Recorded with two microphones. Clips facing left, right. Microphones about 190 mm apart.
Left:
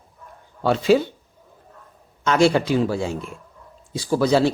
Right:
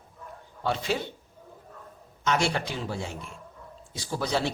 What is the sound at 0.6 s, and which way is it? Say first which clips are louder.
Speech: left 11 dB; 90° left.